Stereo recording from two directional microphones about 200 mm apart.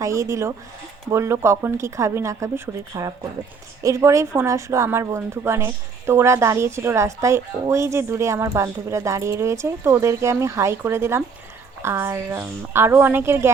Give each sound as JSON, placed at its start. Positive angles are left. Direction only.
{"t": 0.0, "sound": "a woman's voice", "side_deg": -15}